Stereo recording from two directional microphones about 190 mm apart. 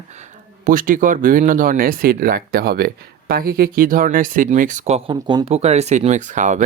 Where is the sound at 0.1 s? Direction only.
40° right (ahead or behind).